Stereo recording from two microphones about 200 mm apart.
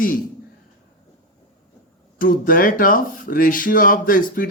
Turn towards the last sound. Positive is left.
turn(degrees=45)  # may be behind; listen again after turning